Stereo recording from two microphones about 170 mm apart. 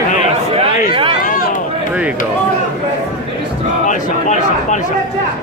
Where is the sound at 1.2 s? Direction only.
55° left (ahead or behind).